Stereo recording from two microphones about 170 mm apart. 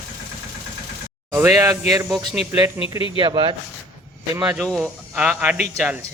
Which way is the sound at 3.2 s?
30° right (ahead or behind).